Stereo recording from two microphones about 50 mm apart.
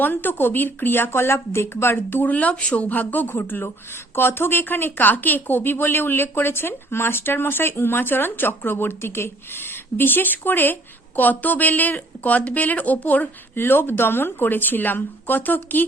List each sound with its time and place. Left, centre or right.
0.0 s a woman's voice: left
2.2 s speech: left
2.9 s a woman's voice: left
13.6 s a woman's voice: left